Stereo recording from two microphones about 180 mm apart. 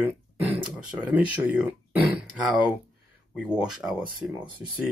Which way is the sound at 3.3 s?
5° right (ahead or behind).